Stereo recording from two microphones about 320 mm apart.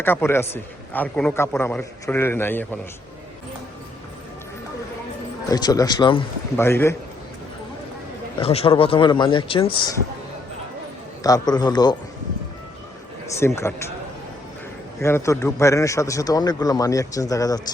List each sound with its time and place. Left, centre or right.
0.0 s a man's voice: centre
5.5 s a man's voice: centre
8.4 s a man's voice: centre
11.2 s a man's voice: centre
13.3 s a man's voice: centre
15.0 s a man's voice: centre